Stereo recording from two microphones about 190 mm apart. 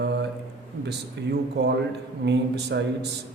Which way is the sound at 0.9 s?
60° right (ahead or behind).